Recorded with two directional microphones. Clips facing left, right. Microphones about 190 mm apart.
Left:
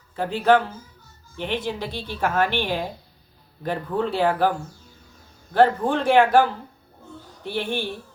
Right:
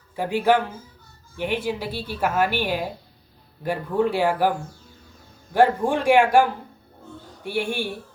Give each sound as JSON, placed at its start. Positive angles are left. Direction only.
{"t": 0.2, "sound": "speech", "side_deg": -10}
{"t": 5.5, "sound": "speech", "side_deg": -10}
{"t": 7.4, "sound": "speech", "side_deg": -10}